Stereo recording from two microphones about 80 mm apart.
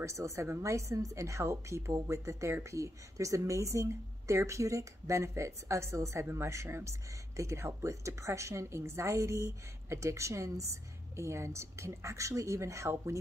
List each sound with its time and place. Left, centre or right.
0.0 s a woman's voice: right